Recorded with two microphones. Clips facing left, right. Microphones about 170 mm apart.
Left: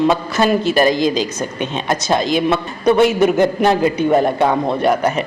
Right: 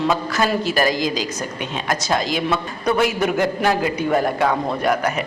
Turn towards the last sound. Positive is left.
turn(degrees=25)  # may be behind; listen again after turning